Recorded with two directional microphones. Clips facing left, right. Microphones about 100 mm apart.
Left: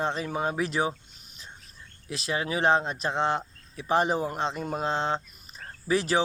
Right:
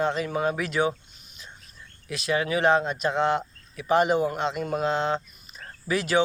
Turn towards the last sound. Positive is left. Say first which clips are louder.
# even
turn(degrees=30)  # may be behind; listen again after turning